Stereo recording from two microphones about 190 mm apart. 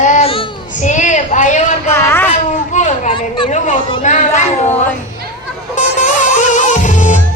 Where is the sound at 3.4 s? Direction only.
40° left (ahead or behind).